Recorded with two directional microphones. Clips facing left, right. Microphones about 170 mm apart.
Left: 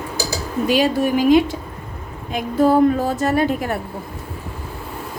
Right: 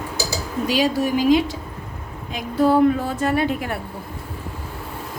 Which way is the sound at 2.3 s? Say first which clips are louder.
Left 2 dB; 45° left (ahead or behind).